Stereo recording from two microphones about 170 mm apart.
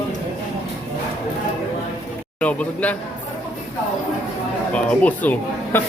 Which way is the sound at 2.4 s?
10° left (ahead or behind).